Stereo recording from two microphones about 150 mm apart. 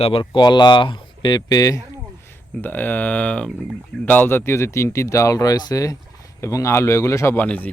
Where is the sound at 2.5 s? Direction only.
10° left (ahead or behind).